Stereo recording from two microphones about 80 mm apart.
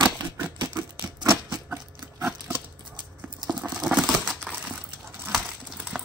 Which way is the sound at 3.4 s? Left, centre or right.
Centre.